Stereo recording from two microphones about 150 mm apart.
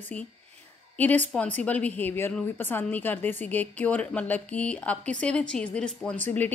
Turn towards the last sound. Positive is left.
turn(degrees=15)  # may be behind; listen again after turning